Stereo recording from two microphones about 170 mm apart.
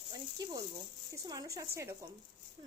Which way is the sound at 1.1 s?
20° right (ahead or behind).